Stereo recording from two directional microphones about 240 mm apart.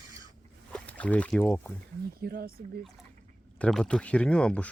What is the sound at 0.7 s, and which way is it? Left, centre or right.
Speech, centre.